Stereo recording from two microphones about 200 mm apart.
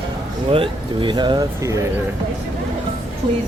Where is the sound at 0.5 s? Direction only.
25° right (ahead or behind).